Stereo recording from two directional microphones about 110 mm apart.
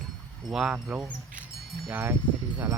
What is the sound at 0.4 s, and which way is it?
Speech, 5° right (ahead or behind).